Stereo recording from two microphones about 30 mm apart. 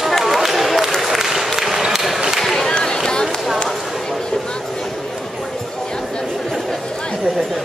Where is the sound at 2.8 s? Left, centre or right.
Centre.